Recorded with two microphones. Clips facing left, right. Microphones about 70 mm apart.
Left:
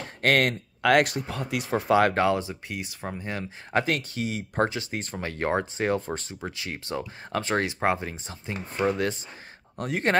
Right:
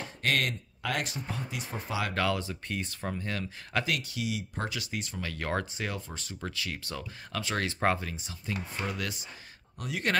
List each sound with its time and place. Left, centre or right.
0.2 s speech: left
2.1 s speech: left
2.7 s speech: centre
3.8 s speech: left
7.6 s speech: centre
8.1 s speech: left
9.8 s speech: left